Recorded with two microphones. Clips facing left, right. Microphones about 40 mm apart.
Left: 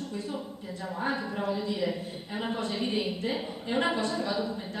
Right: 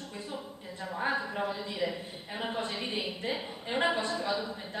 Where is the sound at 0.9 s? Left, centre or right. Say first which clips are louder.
Even; centre.